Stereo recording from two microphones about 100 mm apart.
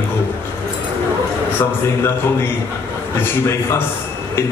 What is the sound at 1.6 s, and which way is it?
Speech, 20° left (ahead or behind).